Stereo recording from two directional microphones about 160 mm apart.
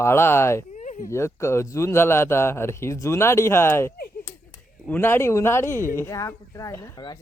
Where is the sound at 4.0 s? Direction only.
70° left (ahead or behind).